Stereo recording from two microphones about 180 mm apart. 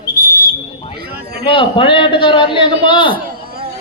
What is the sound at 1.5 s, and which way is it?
A man's voice, 30° left (ahead or behind).